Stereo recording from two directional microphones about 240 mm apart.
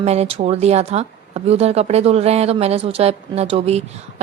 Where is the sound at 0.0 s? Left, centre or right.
Right.